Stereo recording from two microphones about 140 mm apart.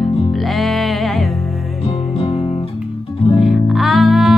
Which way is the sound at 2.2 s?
35° left (ahead or behind).